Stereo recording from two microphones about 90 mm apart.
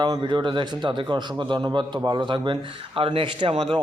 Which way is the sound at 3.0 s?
90° right.